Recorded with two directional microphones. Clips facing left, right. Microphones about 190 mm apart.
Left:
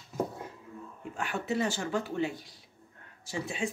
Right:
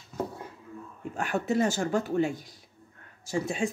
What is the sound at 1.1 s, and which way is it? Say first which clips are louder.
Speech: right 5 dB; 45° right (ahead or behind).